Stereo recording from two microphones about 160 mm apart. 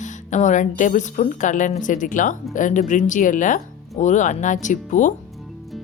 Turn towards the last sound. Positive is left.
turn(degrees=50)  # may be behind; listen again after turning